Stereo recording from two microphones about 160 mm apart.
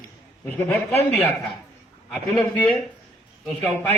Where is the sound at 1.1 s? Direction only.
10° left (ahead or behind).